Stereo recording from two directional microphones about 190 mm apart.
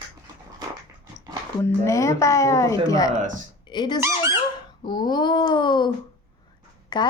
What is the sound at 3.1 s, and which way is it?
Speech, 40° right (ahead or behind).